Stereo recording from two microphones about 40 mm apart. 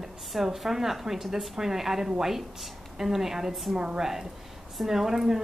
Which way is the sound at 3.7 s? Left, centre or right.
Centre.